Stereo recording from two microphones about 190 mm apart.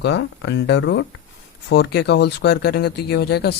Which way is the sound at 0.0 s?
65° left (ahead or behind).